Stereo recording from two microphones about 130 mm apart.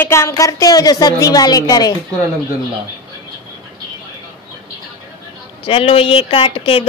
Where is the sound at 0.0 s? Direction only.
20° left (ahead or behind).